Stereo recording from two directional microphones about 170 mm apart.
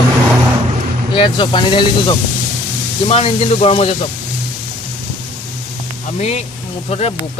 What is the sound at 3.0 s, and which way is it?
Speech, 35° left (ahead or behind).